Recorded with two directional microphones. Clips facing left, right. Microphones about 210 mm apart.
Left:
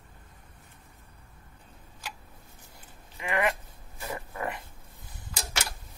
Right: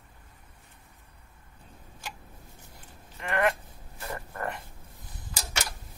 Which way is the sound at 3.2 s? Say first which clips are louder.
Right 1 dB; 5° left (ahead or behind).